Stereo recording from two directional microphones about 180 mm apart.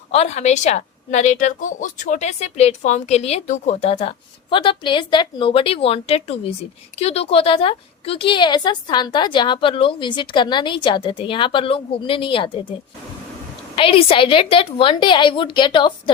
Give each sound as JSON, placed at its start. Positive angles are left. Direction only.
{"t": 0.1, "sound": "a woman's voice", "side_deg": 35}
{"t": 13.7, "sound": "a woman's voice", "side_deg": 30}